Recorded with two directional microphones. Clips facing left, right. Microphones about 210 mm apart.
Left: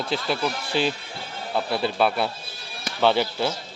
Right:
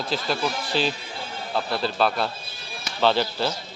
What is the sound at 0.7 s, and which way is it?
Speech, 55° left (ahead or behind).